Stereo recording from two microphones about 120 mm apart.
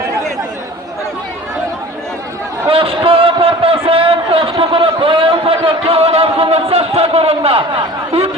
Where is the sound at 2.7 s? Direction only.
50° right (ahead or behind).